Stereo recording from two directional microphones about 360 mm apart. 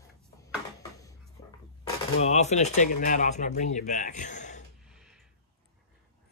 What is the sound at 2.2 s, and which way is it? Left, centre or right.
A man's voice, centre.